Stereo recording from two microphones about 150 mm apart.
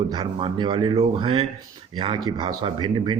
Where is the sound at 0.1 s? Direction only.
35° right (ahead or behind).